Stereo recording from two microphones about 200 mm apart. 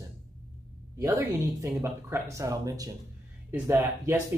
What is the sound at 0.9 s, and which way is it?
Speech, 15° right (ahead or behind).